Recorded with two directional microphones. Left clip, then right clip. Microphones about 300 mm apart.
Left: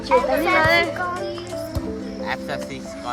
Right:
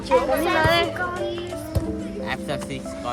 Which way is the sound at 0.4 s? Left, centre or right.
Left.